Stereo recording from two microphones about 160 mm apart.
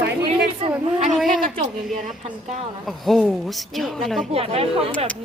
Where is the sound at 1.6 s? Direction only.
45° right (ahead or behind).